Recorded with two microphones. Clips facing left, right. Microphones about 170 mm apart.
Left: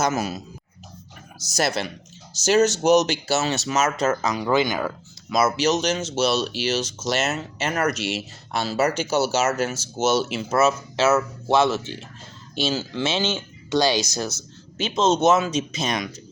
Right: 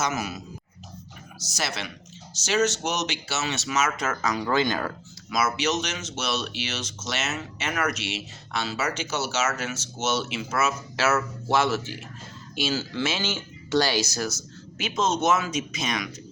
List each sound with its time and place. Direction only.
0.0 s speech: 35° left (ahead or behind)
1.5 s speech: 40° left (ahead or behind); by 4.9 s 10° left (ahead or behind)
5.3 s speech: 35° left (ahead or behind)